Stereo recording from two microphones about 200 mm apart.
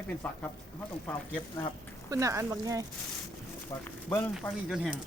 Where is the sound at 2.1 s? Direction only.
15° right (ahead or behind).